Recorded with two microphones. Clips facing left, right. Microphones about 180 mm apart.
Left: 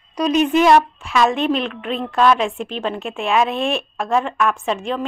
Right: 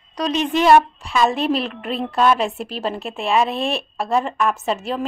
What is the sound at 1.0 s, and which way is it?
Speech, 35° right (ahead or behind).